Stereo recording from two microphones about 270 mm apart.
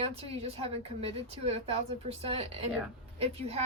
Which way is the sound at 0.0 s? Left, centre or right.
Right.